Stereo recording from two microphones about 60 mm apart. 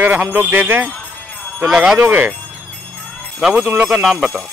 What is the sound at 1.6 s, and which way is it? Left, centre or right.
Speech, centre.